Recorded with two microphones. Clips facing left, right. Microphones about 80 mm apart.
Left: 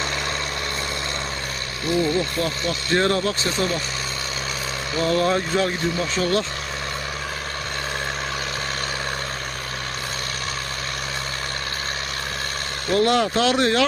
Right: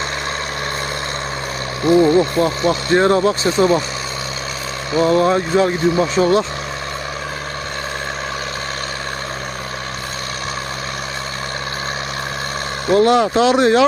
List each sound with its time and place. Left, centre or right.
1.8 s speech: right
4.9 s speech: centre
12.9 s speech: centre